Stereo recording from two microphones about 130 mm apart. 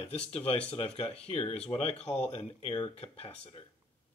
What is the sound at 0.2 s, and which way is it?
Speech, 50° left (ahead or behind).